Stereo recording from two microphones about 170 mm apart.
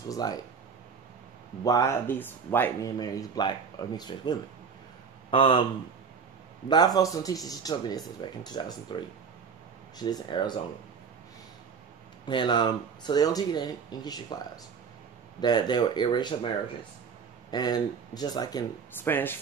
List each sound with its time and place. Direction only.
0.1 s speech: 20° left (ahead or behind)
1.6 s speech: 20° left (ahead or behind)
6.7 s speech: 20° left (ahead or behind)
12.3 s speech: 30° left (ahead or behind)
15.4 s speech: 25° left (ahead or behind)
17.5 s speech: 25° left (ahead or behind)
19.0 s speech: 10° left (ahead or behind)